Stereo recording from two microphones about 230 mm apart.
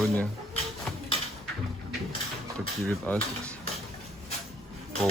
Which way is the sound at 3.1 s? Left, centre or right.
Centre.